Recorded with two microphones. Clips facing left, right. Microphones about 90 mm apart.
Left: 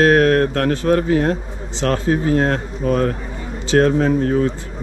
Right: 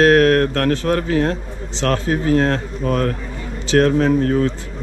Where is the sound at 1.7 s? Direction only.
60° right (ahead or behind).